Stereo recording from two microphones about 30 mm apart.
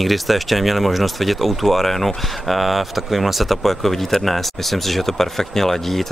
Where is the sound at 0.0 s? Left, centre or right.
Centre.